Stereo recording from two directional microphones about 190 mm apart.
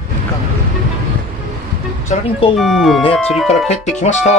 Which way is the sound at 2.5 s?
Centre (ahead or behind).